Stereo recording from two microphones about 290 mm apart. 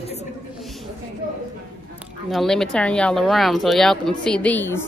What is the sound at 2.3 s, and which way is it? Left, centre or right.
A woman's voice, centre.